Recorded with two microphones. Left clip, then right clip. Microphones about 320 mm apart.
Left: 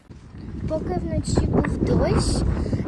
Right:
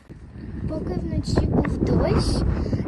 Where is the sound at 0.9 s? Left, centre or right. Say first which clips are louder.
Left 2 dB; centre.